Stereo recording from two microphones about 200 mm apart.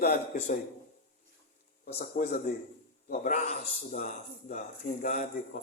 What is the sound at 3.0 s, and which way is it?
Speech, 40° left (ahead or behind).